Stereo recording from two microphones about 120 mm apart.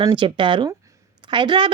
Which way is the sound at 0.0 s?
45° right (ahead or behind).